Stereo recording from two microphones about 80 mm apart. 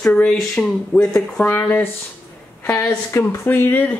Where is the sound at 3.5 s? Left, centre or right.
Left.